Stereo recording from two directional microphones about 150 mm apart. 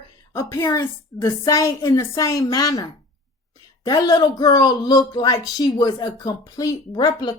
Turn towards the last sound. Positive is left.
turn(degrees=30)  # may be behind; listen again after turning